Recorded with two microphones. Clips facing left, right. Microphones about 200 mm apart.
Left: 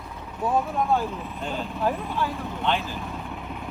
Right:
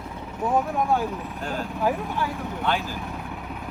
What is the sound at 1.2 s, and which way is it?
Speech, centre (ahead or behind).